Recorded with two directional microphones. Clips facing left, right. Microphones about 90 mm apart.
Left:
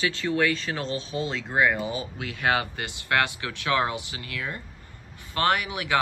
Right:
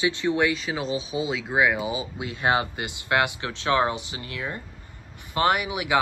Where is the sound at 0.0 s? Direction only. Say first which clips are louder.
Right 2 dB; 20° right (ahead or behind).